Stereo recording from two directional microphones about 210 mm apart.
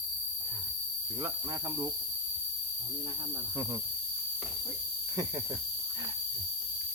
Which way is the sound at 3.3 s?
15° right (ahead or behind).